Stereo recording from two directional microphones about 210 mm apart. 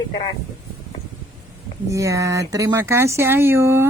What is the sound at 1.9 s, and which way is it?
Speech, 15° right (ahead or behind).